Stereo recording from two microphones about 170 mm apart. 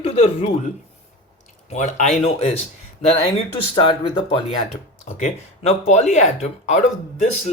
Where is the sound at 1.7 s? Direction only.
45° left (ahead or behind).